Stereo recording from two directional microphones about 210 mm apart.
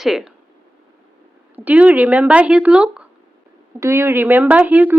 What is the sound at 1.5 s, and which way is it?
Speech, 5° right (ahead or behind).